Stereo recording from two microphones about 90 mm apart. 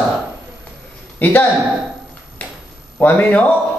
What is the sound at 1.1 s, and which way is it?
Speech, 20° left (ahead or behind).